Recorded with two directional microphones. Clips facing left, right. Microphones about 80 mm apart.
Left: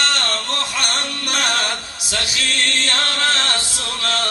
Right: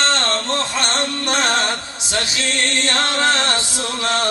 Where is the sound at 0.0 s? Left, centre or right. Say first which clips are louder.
Right 3 dB; right.